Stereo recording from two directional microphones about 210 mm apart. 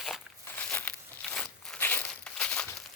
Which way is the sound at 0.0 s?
5° left (ahead or behind).